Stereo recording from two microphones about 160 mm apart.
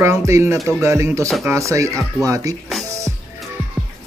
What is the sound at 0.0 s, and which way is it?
Speech, 15° right (ahead or behind).